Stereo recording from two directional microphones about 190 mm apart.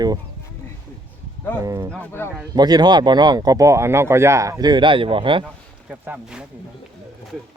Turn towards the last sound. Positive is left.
turn(degrees=-5)  # may be behind; listen again after turning